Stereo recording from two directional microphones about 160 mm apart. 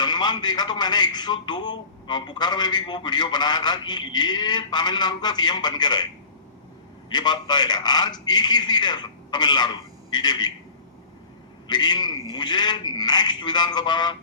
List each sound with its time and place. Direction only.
0.0 s a man's voice: 25° left (ahead or behind)
7.1 s a man's voice: 25° left (ahead or behind)
11.7 s a man's voice: 25° left (ahead or behind)